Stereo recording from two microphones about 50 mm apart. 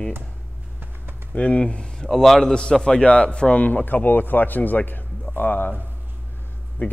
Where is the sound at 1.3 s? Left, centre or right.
Left.